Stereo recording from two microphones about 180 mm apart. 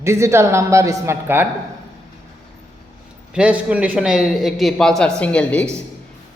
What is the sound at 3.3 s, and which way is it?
A man's voice, 5° right (ahead or behind).